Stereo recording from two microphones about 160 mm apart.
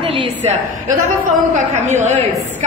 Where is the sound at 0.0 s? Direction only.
35° right (ahead or behind).